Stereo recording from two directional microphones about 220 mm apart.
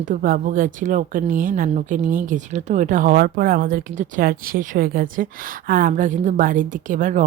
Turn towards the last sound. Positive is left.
turn(degrees=-35)  # may be behind; listen again after turning